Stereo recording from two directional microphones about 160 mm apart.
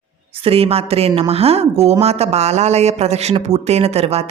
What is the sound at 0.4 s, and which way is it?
Speech, 40° right (ahead or behind).